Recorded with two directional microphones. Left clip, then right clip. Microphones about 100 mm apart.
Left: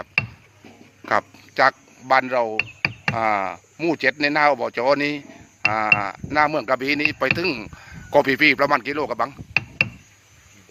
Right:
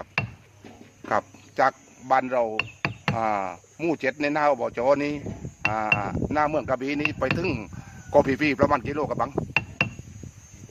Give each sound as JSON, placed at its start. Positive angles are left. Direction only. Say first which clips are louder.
{"t": 1.0, "sound": "speech", "louder": "left 4 dB", "side_deg": 20}
{"t": 7.4, "sound": "speech", "louder": "left 4 dB", "side_deg": 5}
{"t": 8.1, "sound": "speech", "louder": "left 5 dB", "side_deg": 20}
{"t": 9.5, "sound": "a sound", "louder": "left 4 dB", "side_deg": 10}